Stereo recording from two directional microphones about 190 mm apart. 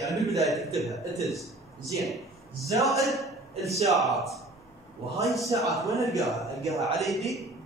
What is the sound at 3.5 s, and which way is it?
Speech, 35° right (ahead or behind).